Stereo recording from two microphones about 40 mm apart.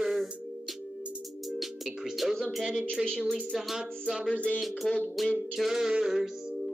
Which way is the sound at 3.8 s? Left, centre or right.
Centre.